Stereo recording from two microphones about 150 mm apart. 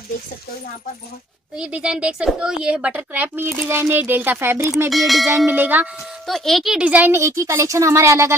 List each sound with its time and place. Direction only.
1.6 s a woman's voice: 5° right (ahead or behind)
4.8 s bell: centre (ahead or behind)
5.5 s a woman's voice: 10° right (ahead or behind)
6.2 s a woman's voice: centre (ahead or behind); by 8.4 s 20° right (ahead or behind)